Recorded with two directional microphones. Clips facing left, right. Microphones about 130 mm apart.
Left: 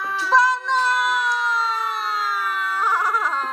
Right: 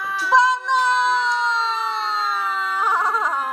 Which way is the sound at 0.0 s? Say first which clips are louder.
Even; centre (ahead or behind).